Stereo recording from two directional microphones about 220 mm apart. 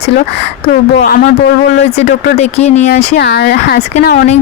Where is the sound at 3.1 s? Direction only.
50° left (ahead or behind).